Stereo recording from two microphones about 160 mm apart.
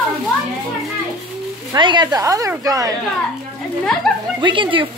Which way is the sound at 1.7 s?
30° right (ahead or behind).